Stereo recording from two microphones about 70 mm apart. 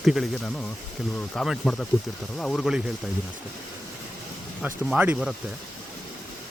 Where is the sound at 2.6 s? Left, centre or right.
Centre.